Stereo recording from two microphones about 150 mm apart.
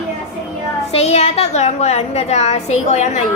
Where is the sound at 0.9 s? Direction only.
45° left (ahead or behind).